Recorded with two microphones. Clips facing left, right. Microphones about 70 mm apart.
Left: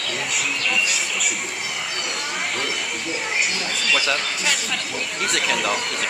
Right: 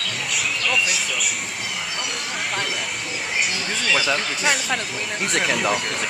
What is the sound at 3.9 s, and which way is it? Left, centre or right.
Speech, centre.